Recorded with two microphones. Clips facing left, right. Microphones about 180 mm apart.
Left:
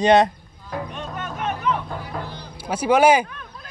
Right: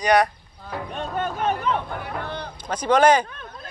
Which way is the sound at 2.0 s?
60° right (ahead or behind).